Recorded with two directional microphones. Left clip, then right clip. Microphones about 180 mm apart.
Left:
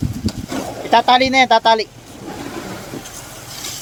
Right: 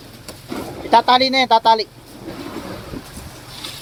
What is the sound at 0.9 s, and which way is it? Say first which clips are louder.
Speech: left 1 dB; 5° left (ahead or behind).